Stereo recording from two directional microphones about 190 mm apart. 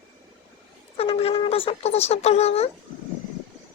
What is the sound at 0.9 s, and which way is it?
Speech, 30° left (ahead or behind).